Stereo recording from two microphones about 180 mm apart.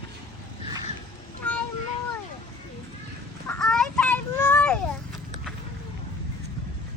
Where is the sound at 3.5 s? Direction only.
5° left (ahead or behind).